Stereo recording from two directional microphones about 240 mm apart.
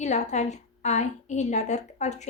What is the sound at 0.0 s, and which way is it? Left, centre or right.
A woman's voice, left.